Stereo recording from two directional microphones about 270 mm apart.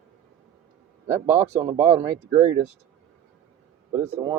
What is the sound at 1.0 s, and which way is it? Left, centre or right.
A man's voice, centre.